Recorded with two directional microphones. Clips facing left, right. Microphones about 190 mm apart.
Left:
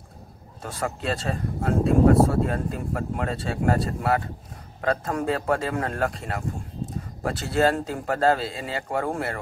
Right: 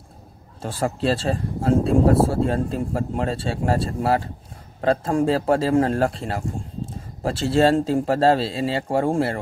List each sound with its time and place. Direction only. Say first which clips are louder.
0.6 s speech: right 6 dB; 30° right (ahead or behind)